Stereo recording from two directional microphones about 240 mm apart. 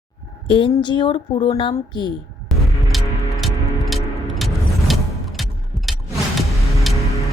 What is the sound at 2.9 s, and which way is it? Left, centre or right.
Music, centre.